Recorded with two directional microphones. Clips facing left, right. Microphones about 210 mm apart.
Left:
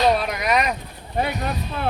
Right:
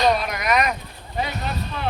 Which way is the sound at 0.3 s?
30° left (ahead or behind).